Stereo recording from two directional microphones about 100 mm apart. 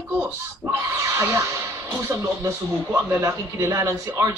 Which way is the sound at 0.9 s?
30° right (ahead or behind).